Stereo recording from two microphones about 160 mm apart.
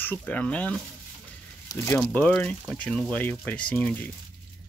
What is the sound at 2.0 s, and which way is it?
Speech, 5° left (ahead or behind).